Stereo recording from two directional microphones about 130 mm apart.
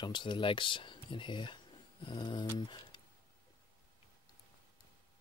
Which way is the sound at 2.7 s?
35° left (ahead or behind).